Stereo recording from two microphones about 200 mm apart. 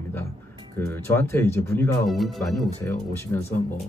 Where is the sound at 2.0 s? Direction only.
Centre (ahead or behind).